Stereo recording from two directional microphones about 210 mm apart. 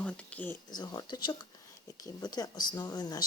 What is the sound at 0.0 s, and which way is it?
Speech, 5° left (ahead or behind).